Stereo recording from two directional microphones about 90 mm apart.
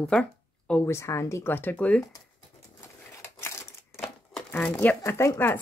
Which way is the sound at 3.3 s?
30° left (ahead or behind).